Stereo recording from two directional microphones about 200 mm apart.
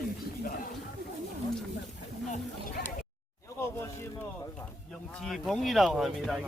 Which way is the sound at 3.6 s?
10° left (ahead or behind).